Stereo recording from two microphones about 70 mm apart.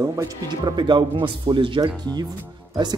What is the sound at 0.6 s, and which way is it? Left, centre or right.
Speech, right.